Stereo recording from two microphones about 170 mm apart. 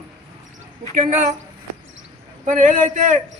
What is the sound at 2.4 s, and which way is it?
Speech, 50° right (ahead or behind).